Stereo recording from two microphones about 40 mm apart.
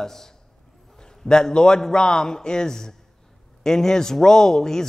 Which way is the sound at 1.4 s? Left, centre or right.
Centre.